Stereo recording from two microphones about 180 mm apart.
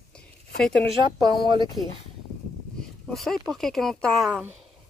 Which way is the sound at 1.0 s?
25° right (ahead or behind).